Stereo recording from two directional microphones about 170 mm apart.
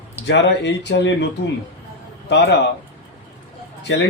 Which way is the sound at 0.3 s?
90° left.